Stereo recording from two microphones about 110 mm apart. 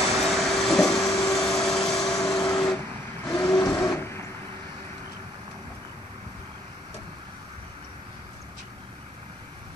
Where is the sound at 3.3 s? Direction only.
10° left (ahead or behind).